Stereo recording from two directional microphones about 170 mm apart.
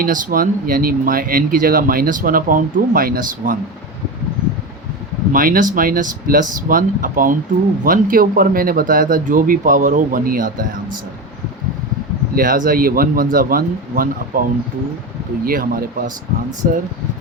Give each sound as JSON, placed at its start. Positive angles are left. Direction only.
{"t": 0.0, "sound": "speech", "side_deg": -55}
{"t": 5.3, "sound": "speech", "side_deg": -55}
{"t": 12.3, "sound": "speech", "side_deg": -55}
{"t": 15.4, "sound": "speech", "side_deg": -55}